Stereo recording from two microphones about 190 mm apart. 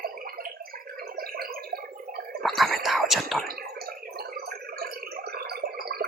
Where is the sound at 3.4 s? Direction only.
50° right (ahead or behind).